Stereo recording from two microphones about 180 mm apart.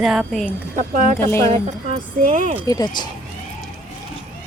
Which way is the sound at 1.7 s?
45° right (ahead or behind).